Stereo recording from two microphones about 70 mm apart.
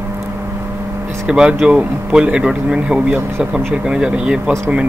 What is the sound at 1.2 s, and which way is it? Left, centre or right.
Speech, centre.